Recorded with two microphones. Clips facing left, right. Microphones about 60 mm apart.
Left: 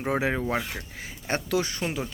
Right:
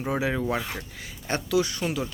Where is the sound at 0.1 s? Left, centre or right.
Left.